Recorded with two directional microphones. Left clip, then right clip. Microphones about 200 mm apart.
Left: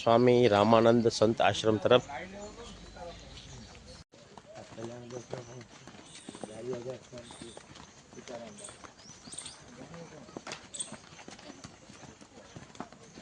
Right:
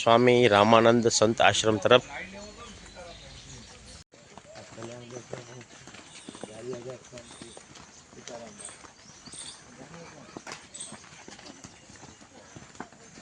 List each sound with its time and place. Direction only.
0.0 s speech: 5° right (ahead or behind)
8.3 s clip-clop: 35° right (ahead or behind)